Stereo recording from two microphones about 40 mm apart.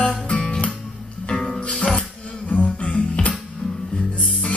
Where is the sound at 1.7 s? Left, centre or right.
Left.